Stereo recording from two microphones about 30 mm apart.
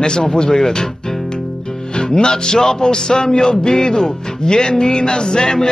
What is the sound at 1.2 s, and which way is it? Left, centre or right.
Music, left.